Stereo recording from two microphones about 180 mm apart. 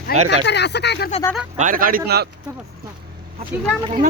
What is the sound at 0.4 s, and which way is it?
Speech, 70° left (ahead or behind).